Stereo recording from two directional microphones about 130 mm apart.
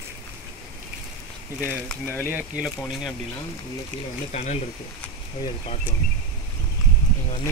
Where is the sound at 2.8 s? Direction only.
5° left (ahead or behind).